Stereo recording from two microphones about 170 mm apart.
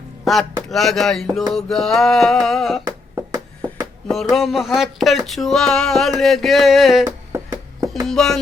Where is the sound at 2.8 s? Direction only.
20° right (ahead or behind).